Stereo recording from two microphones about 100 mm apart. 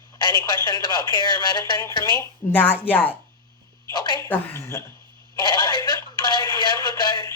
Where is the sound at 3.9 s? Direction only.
45° left (ahead or behind).